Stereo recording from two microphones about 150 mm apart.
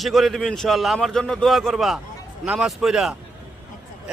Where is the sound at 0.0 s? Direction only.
Centre (ahead or behind).